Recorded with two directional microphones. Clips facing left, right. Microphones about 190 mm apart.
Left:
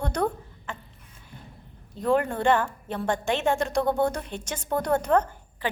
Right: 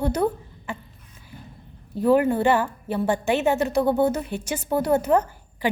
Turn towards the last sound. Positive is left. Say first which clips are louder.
# right 5 dB
turn(degrees=-10)  # may be behind; listen again after turning